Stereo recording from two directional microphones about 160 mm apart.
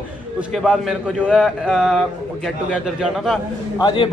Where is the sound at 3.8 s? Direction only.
30° left (ahead or behind).